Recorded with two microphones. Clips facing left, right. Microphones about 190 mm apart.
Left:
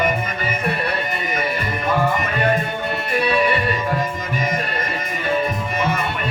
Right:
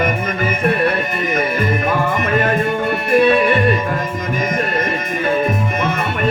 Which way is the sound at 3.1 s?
50° right (ahead or behind).